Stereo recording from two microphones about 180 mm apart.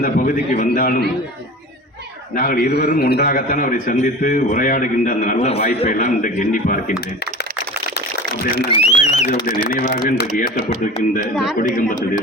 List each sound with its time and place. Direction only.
0.0 s a man's voice: 45° left (ahead or behind)
2.3 s a man's voice: 55° left (ahead or behind)
8.7 s speech: 40° left (ahead or behind)
9.6 s a man's voice: 60° left (ahead or behind)
11.5 s a man's voice: 50° left (ahead or behind)